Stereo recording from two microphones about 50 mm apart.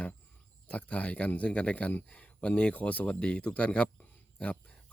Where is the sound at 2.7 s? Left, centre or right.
Left.